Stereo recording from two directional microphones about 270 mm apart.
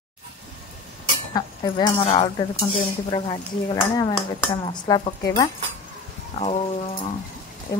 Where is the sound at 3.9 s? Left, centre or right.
Centre.